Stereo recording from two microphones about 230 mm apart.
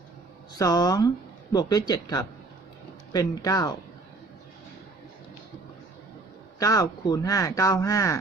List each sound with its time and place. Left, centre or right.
0.6 s speech: centre
6.6 s speech: centre